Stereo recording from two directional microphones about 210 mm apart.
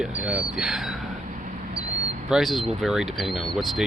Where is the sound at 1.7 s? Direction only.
30° right (ahead or behind).